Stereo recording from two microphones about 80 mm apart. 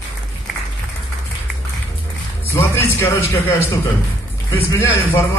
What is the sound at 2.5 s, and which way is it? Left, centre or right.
A man's voice, left.